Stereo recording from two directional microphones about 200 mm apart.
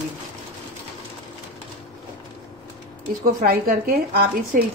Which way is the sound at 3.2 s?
50° right (ahead or behind).